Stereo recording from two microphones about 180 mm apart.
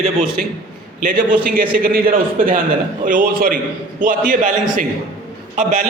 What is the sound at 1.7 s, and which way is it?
A man's voice, 55° right (ahead or behind).